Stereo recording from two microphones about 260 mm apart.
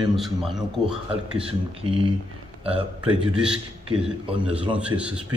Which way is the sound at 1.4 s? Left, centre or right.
Right.